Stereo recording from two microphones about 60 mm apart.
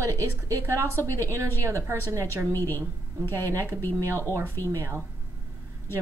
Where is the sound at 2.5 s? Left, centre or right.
Left.